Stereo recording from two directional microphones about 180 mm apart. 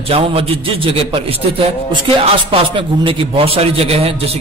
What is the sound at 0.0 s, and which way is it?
A man's voice, 35° right (ahead or behind).